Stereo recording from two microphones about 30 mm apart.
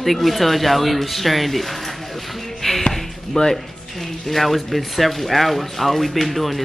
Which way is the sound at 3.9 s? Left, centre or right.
Centre.